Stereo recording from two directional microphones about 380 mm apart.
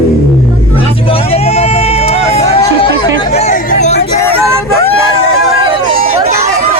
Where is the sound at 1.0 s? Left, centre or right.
Centre.